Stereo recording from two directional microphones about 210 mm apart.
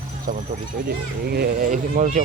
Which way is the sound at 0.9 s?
50° right (ahead or behind).